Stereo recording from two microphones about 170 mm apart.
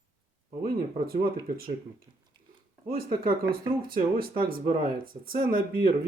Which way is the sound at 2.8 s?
60° right (ahead or behind).